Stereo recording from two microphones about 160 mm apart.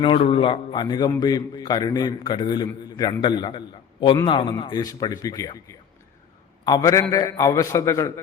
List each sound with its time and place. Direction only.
0.0 s a man's voice: 35° left (ahead or behind); by 8.2 s 20° left (ahead or behind)